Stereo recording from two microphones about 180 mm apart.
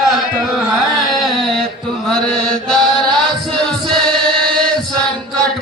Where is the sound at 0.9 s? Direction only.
Centre (ahead or behind).